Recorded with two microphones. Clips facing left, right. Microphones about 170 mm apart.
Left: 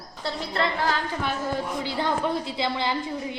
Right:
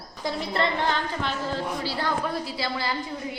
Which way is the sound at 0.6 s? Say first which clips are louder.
Left 1 dB; 5° left (ahead or behind).